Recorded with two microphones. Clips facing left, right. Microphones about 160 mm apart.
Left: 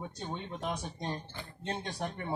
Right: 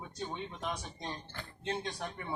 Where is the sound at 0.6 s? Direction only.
50° left (ahead or behind).